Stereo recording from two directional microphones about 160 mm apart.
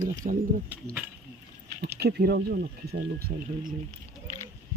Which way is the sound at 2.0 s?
90° right.